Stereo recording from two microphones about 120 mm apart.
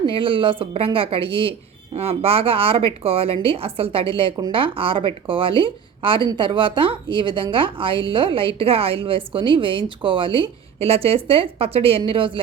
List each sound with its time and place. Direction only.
0.0 s a woman's voice: 45° right (ahead or behind)